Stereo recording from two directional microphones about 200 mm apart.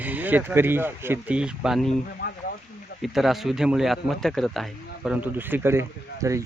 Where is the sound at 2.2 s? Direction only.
50° left (ahead or behind).